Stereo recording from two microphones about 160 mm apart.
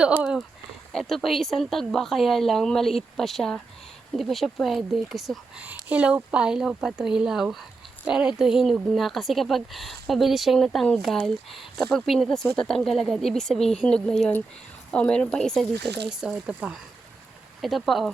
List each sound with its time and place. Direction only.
0.0 s speech: 5° right (ahead or behind)
15.7 s speech: 90° right
16.0 s speech: 5° right (ahead or behind)